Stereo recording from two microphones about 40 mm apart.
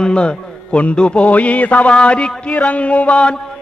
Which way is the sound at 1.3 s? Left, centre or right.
Left.